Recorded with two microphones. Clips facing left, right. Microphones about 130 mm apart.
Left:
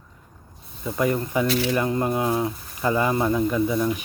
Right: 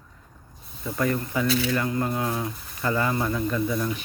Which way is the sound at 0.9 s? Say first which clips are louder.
Left 3 dB; 15° left (ahead or behind).